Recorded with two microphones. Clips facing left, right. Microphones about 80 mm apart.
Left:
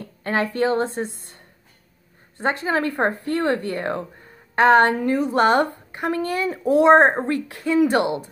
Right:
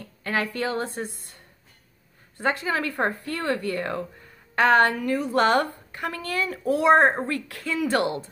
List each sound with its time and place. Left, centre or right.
0.2 s speech: left